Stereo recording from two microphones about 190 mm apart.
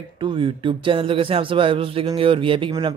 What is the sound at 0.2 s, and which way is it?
Speech, 25° right (ahead or behind).